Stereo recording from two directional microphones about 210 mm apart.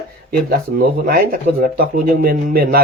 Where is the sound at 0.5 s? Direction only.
45° right (ahead or behind).